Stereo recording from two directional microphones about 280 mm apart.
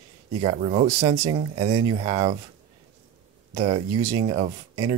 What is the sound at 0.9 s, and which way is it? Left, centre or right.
Speech, centre.